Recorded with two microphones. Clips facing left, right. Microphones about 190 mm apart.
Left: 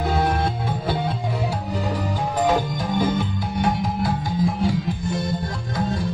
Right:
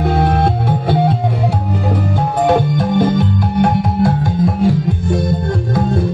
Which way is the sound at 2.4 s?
65° right (ahead or behind).